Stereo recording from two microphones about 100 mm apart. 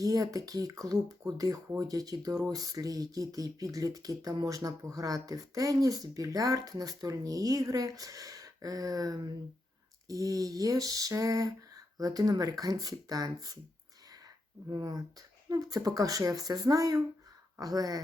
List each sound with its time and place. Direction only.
0.0 s speech: 35° right (ahead or behind)
14.7 s speech: 40° right (ahead or behind)